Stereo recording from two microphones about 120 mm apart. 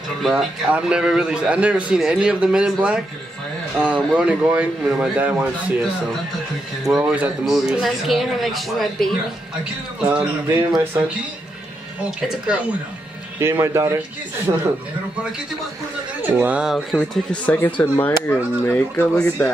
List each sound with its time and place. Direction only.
0.2 s a man's voice: centre (ahead or behind)
7.0 s speech: 10° right (ahead or behind)
10.0 s a man's voice: 20° right (ahead or behind)
13.4 s a man's voice: 20° right (ahead or behind)
14.5 s speech: 40° right (ahead or behind)
16.2 s a man's voice: 15° right (ahead or behind)
16.6 s speech: centre (ahead or behind)